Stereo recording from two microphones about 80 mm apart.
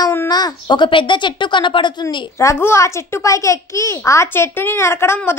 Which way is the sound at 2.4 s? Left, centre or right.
Left.